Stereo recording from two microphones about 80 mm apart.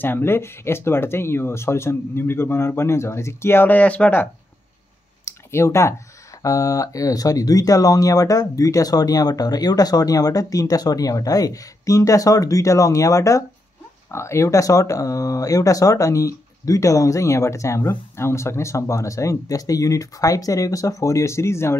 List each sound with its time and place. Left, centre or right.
0.0 s speech: left
5.2 s a sound: left
6.4 s speech: left